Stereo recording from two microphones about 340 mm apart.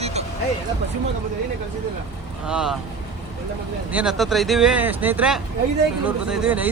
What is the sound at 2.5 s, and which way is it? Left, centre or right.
Speech, centre.